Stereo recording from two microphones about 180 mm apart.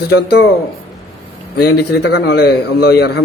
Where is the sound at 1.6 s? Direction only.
65° left (ahead or behind).